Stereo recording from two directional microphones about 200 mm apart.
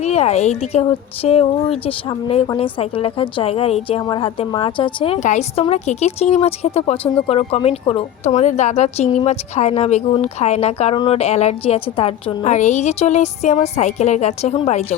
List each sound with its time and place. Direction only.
0.0 s a woman's voice: 35° left (ahead or behind)